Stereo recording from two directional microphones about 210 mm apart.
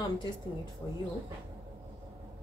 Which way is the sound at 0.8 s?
15° left (ahead or behind).